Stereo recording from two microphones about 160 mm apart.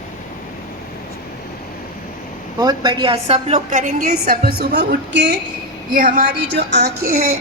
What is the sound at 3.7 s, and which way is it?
Speech, 50° right (ahead or behind).